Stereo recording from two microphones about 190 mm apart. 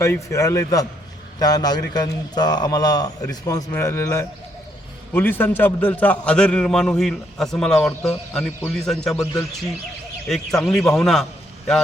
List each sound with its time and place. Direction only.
0.0 s a man's voice: 15° left (ahead or behind)
10.2 s a man's voice: centre (ahead or behind)